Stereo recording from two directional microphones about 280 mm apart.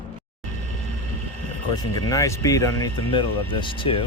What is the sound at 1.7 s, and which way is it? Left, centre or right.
Speech, centre.